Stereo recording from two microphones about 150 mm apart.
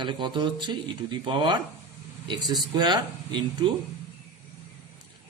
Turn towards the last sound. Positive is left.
turn(degrees=-30)  # may be behind; listen again after turning